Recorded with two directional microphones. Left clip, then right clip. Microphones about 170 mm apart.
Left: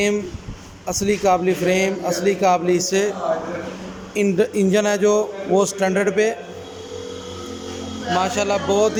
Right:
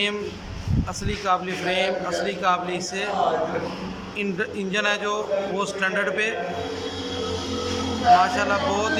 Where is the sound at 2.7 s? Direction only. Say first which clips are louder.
Left 9 dB; 50° left (ahead or behind).